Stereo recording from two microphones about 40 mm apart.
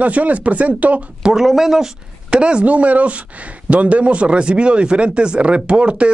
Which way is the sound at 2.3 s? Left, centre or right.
Right.